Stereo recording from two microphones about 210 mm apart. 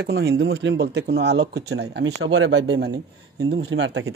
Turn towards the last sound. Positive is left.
turn(degrees=-60)  # may be behind; listen again after turning